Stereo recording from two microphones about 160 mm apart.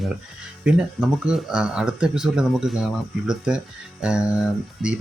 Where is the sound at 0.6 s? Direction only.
5° right (ahead or behind).